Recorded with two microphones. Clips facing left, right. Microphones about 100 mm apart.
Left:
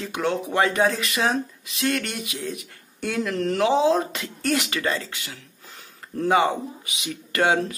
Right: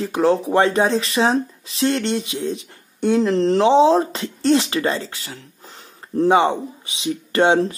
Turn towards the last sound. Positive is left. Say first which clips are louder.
# right 5 dB
turn(degrees=-30)  # may be behind; listen again after turning